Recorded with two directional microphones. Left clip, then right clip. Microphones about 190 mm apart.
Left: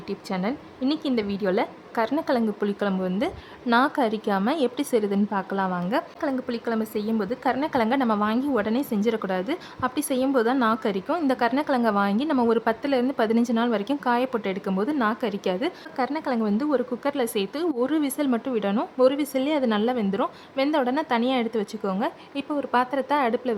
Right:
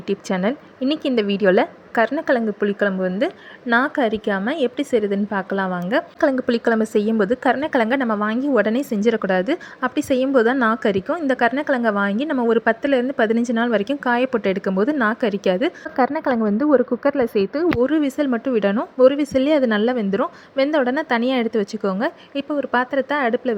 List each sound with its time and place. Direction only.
0.1 s a woman's voice: 20° right (ahead or behind)
17.0 s speech: centre (ahead or behind)
17.6 s a woman's voice: 15° right (ahead or behind)